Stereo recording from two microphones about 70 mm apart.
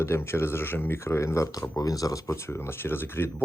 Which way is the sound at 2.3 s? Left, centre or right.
Left.